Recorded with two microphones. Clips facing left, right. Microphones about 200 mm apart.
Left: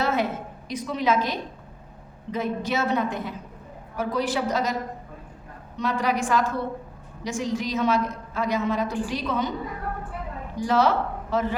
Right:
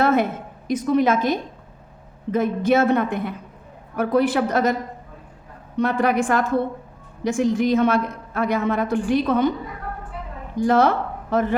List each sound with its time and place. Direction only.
0.0 s a sound: 55° right (ahead or behind)
0.7 s a woman's voice: 50° right (ahead or behind)
10.6 s a woman's voice: 50° right (ahead or behind)